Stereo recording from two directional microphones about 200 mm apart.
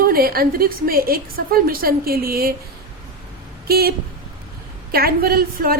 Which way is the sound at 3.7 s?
50° right (ahead or behind).